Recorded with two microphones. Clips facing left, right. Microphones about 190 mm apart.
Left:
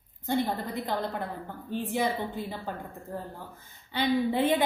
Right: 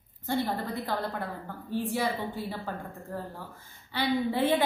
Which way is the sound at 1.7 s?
20° left (ahead or behind).